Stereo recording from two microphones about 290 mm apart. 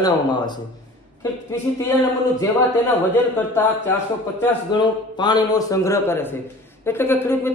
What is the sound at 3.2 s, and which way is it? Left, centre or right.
A man's voice, centre.